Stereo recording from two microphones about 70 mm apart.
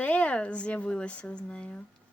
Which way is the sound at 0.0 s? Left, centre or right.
Centre.